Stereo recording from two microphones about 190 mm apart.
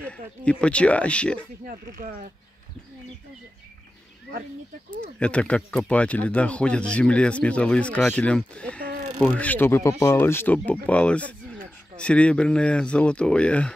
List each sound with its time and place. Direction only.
0.0 s speech: 5° left (ahead or behind)
1.7 s speech: 50° right (ahead or behind)
5.2 s speech: 5° left (ahead or behind)